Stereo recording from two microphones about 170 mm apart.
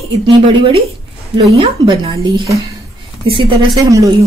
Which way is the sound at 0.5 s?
30° right (ahead or behind).